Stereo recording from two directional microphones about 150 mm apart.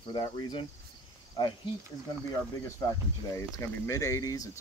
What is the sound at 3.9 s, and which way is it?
Speech, 20° left (ahead or behind).